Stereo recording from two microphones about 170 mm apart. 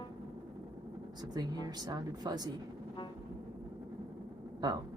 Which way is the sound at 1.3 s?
25° right (ahead or behind).